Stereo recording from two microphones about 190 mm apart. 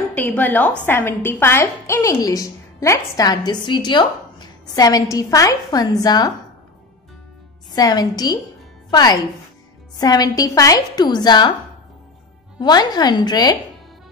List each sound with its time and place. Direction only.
0.1 s a woman's voice: 10° left (ahead or behind)
7.7 s a woman's voice: 20° left (ahead or behind)
12.5 s a woman's voice: 20° left (ahead or behind)